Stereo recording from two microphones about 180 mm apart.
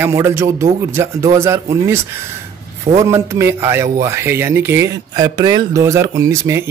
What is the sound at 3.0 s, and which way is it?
Speech, 15° right (ahead or behind).